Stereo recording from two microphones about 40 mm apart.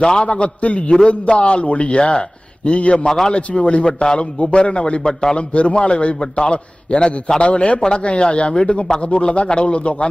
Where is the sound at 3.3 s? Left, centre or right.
Left.